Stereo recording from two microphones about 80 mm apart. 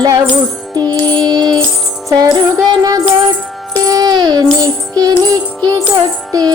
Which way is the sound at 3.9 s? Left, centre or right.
Right.